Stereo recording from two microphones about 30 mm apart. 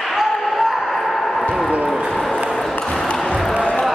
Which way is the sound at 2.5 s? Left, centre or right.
Centre.